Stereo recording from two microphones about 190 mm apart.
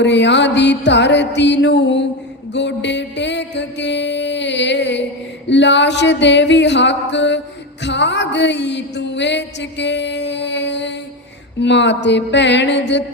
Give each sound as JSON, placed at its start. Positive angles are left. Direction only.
{"t": 0.0, "sound": "music", "side_deg": 65}